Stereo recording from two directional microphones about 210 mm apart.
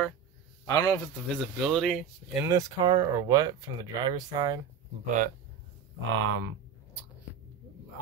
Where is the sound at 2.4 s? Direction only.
20° right (ahead or behind).